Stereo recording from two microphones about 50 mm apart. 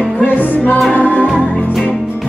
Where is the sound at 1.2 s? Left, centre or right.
Right.